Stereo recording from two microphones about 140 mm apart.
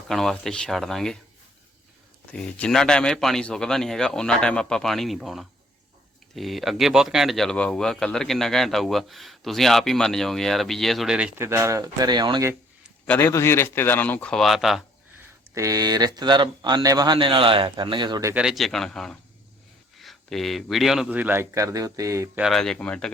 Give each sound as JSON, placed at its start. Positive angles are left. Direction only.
{"t": 0.1, "sound": "speech", "side_deg": 0}
{"t": 2.3, "sound": "speech", "side_deg": 5}
{"t": 11.3, "sound": "speech", "side_deg": -20}
{"t": 13.1, "sound": "speech", "side_deg": 15}
{"t": 15.5, "sound": "speech", "side_deg": -25}
{"t": 18.3, "sound": "speech", "side_deg": 0}
{"t": 22.4, "sound": "speech", "side_deg": 0}